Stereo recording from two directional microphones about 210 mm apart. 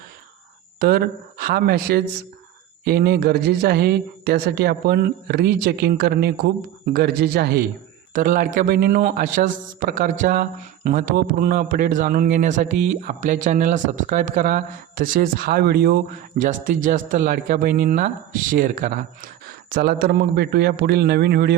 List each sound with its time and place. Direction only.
0.8 s a woman's voice: 45° right (ahead or behind)
16.4 s a man's voice: 35° right (ahead or behind)